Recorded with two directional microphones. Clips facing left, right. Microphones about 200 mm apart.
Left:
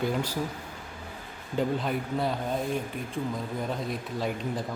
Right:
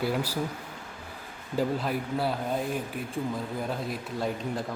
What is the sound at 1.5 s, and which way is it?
Speech, centre (ahead or behind).